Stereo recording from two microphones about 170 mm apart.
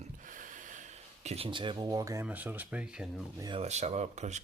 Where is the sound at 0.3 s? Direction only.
50° right (ahead or behind); by 2.2 s 20° right (ahead or behind).